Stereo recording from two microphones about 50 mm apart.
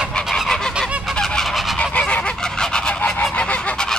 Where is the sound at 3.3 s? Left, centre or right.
Left.